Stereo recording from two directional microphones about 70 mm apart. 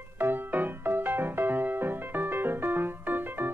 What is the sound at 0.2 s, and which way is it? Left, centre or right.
Music, right.